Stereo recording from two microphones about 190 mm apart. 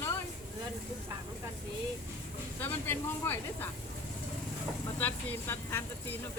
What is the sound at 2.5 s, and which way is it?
Speech, 10° left (ahead or behind).